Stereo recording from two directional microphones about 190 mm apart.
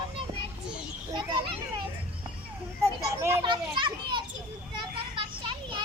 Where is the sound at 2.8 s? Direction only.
15° right (ahead or behind).